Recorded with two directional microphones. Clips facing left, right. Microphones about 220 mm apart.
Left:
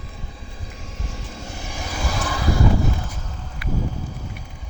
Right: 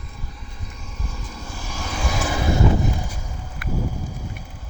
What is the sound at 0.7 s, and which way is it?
Vehicle, 90° left.